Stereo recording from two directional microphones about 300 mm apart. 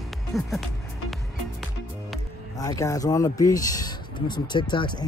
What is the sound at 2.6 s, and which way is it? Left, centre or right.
A woman's voice, centre.